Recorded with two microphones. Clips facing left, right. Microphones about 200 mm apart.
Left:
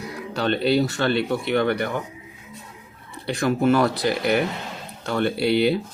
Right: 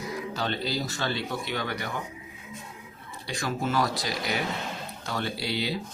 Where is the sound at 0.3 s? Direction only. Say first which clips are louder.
Left 12 dB; 65° left (ahead or behind).